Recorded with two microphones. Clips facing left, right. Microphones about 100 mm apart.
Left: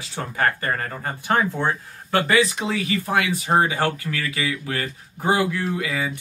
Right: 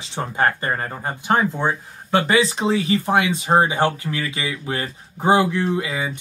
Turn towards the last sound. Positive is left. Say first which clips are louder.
# right 2 dB
turn(degrees=-20)  # may be behind; listen again after turning